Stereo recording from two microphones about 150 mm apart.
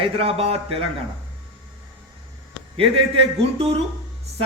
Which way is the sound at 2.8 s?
40° right (ahead or behind).